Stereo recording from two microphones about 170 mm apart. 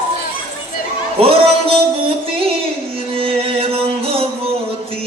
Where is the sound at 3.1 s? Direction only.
35° right (ahead or behind).